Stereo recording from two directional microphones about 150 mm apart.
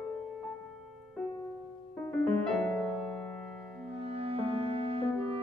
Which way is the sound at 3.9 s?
40° right (ahead or behind).